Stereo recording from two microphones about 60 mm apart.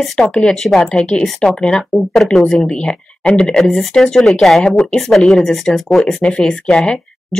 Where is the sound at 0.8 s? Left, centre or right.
Centre.